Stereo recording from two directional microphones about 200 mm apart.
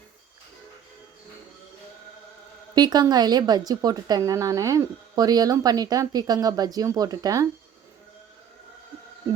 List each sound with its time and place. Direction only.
2.7 s a woman's voice: 20° right (ahead or behind)